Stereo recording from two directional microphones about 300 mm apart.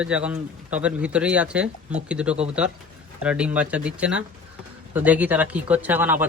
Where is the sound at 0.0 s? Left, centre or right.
Centre.